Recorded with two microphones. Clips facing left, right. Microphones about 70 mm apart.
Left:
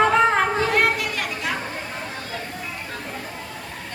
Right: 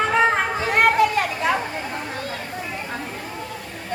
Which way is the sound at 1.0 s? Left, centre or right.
Right.